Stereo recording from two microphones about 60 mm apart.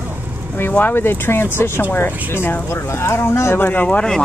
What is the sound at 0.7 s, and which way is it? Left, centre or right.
Speech, left.